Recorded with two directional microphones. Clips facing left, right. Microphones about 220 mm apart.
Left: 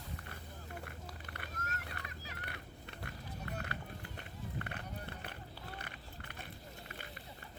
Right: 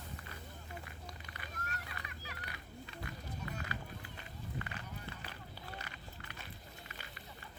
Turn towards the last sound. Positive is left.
turn(degrees=55)  # may be behind; listen again after turning